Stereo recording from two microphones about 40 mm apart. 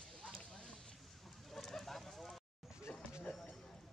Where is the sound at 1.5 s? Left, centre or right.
Centre.